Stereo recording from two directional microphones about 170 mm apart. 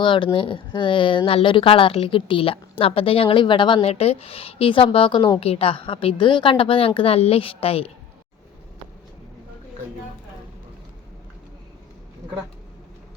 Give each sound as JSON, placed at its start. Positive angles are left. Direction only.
{"t": 0.0, "sound": "speech", "side_deg": 30}